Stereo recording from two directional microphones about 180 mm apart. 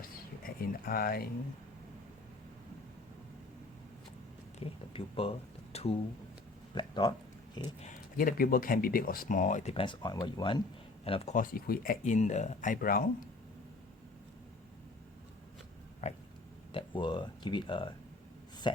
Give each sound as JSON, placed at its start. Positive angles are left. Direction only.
{"t": 0.0, "sound": "a sound", "side_deg": 50}
{"t": 4.6, "sound": "speech", "side_deg": 30}
{"t": 7.8, "sound": "speech", "side_deg": 45}
{"t": 11.3, "sound": "speech", "side_deg": 55}
{"t": 16.0, "sound": "a sound", "side_deg": 40}
{"t": 16.7, "sound": "speech", "side_deg": 25}